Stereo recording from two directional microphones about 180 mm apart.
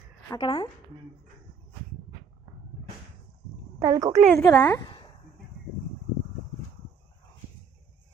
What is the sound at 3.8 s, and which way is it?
Speech, 20° right (ahead or behind).